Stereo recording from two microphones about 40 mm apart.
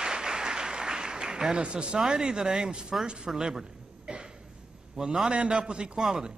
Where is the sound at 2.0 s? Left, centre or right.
Centre.